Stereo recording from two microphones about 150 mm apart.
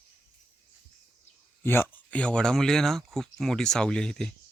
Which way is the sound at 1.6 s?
15° left (ahead or behind).